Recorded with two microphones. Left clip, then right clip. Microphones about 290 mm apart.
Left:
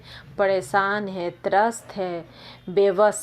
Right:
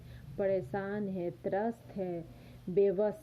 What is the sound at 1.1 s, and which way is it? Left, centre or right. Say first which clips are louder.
Speech: left 13 dB; left.